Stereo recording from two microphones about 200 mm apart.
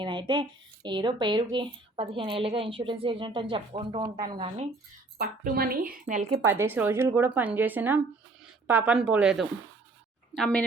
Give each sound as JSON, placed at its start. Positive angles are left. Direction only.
{"t": 0.0, "sound": "speech", "side_deg": -25}
{"t": 5.1, "sound": "a woman's voice", "side_deg": -50}
{"t": 6.4, "sound": "a woman's voice", "side_deg": -10}